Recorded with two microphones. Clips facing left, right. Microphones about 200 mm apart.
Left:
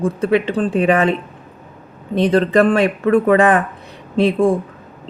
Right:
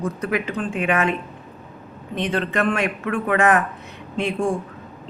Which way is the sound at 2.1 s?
35° left (ahead or behind).